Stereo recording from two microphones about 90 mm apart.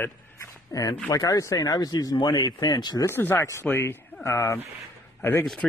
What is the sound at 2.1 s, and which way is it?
Speech, 60° left (ahead or behind).